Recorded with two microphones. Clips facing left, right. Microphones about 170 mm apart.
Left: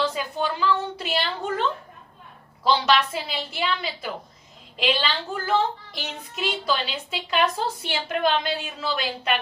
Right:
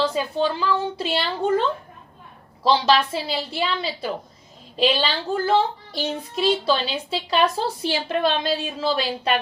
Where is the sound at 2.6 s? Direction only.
30° right (ahead or behind).